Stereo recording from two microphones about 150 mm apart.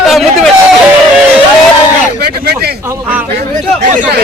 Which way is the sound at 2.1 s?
90° right.